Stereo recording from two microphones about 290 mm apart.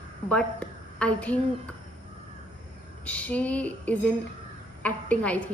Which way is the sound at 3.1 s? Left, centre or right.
Centre.